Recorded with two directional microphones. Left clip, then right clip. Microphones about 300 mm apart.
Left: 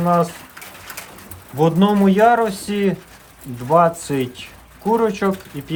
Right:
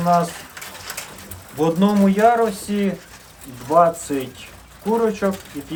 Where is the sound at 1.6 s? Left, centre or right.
Left.